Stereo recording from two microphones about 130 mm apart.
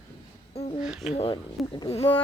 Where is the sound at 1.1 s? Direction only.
45° left (ahead or behind).